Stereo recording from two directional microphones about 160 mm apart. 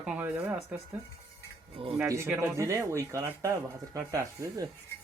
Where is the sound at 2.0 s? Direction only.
15° right (ahead or behind).